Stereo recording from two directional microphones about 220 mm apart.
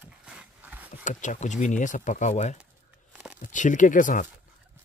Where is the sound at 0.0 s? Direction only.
5° right (ahead or behind).